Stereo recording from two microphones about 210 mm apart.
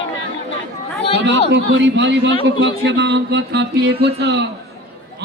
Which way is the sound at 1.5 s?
60° right (ahead or behind).